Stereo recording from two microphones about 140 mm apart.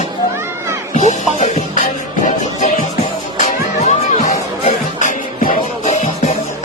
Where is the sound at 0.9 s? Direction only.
60° left (ahead or behind).